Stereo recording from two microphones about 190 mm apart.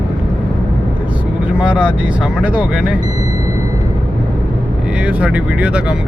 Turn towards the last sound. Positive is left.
turn(degrees=-5)  # may be behind; listen again after turning